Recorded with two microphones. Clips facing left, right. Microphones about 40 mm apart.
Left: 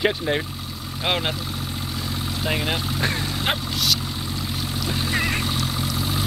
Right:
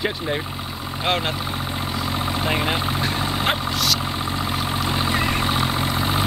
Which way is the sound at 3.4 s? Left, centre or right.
Centre.